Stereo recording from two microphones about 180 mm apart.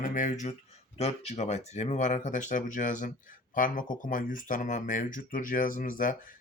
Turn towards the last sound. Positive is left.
turn(degrees=50)  # may be behind; listen again after turning